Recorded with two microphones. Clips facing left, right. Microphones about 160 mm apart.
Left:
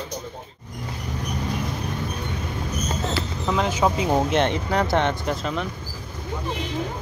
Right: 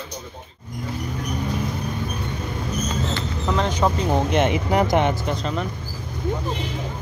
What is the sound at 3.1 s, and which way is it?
Speech, 5° left (ahead or behind).